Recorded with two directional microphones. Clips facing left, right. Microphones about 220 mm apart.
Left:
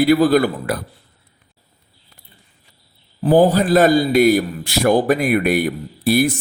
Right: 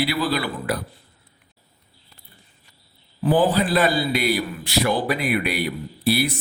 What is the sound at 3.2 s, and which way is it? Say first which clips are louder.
A man's voice: left 5 dB; 40° left (ahead or behind).